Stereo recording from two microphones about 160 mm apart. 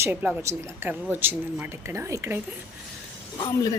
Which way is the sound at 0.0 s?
10° right (ahead or behind).